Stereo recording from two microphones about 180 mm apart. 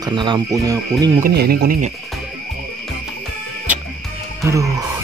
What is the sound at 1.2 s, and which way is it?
Speech, 60° right (ahead or behind).